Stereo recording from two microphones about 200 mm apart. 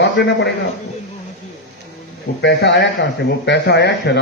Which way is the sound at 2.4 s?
60° left (ahead or behind).